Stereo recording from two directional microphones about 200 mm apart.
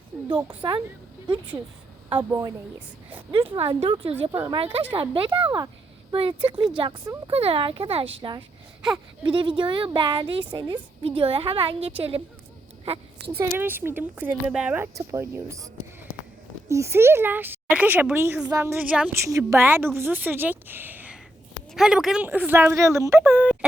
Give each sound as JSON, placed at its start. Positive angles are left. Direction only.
{"t": 0.4, "sound": "a woman's voice", "side_deg": -20}
{"t": 2.1, "sound": "speech", "side_deg": -15}
{"t": 3.5, "sound": "a woman's voice", "side_deg": -25}
{"t": 13.4, "sound": "speech", "side_deg": -10}